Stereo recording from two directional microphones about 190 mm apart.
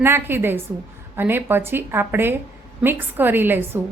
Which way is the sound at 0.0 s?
10° right (ahead or behind).